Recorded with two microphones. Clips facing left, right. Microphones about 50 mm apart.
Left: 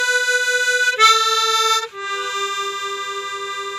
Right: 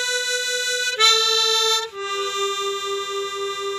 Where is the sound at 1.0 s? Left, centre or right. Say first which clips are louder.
Left 4 dB; centre.